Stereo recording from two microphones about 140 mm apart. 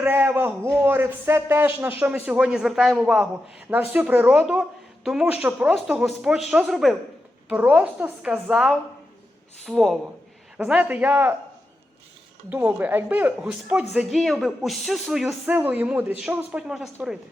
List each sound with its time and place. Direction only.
0.0 s a man's voice: 15° right (ahead or behind)
7.4 s a man's voice: 10° right (ahead or behind)
12.5 s a man's voice: 10° right (ahead or behind)